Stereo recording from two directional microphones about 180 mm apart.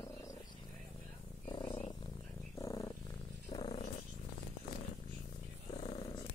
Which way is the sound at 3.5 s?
30° left (ahead or behind).